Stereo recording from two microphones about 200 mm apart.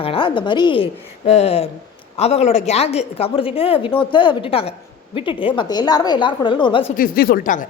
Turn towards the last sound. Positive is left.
turn(degrees=40)  # may be behind; listen again after turning